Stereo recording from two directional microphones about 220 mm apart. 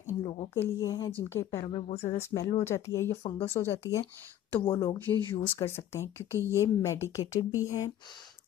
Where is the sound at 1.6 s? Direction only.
25° left (ahead or behind).